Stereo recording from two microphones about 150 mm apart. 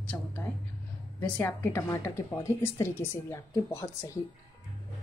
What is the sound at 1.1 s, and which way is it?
Speech, 10° left (ahead or behind).